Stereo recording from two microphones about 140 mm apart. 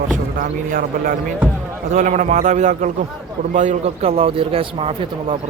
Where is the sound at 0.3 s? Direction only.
75° right (ahead or behind).